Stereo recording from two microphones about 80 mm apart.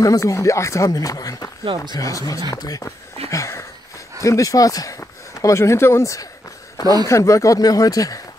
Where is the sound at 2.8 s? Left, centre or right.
Left.